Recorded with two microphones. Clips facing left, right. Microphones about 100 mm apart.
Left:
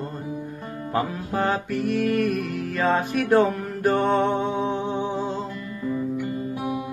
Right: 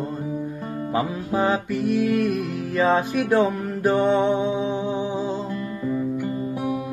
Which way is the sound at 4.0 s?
55° left (ahead or behind).